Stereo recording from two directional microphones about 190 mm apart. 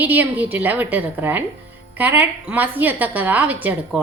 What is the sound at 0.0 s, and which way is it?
A woman's voice, 10° right (ahead or behind).